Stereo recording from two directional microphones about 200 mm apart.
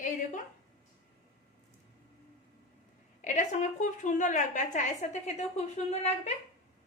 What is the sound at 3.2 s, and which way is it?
A woman's voice, 40° left (ahead or behind).